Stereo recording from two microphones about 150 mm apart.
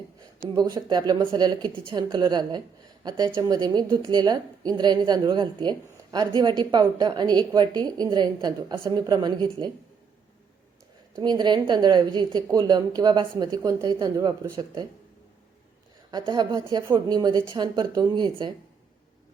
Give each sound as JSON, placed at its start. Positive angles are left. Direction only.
{"t": 0.2, "sound": "a woman's voice", "side_deg": -25}
{"t": 11.2, "sound": "a woman's voice", "side_deg": -30}
{"t": 16.1, "sound": "a woman's voice", "side_deg": -25}